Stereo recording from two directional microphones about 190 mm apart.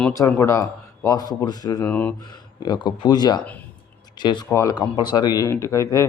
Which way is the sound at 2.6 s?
25° left (ahead or behind).